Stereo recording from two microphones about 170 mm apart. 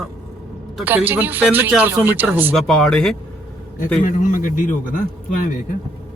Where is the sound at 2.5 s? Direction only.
5° left (ahead or behind).